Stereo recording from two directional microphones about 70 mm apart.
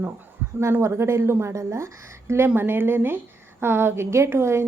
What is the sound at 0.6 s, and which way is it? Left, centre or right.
A woman's voice, right.